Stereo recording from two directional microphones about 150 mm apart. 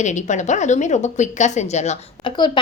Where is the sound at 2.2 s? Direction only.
30° left (ahead or behind).